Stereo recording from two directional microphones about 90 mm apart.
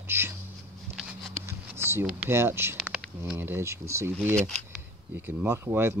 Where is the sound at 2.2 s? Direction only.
25° right (ahead or behind).